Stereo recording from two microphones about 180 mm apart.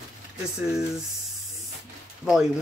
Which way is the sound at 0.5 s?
5° right (ahead or behind).